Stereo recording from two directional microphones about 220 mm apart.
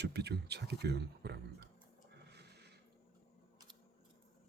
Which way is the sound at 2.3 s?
50° right (ahead or behind).